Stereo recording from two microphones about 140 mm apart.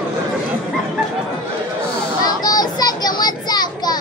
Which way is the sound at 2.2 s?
30° left (ahead or behind).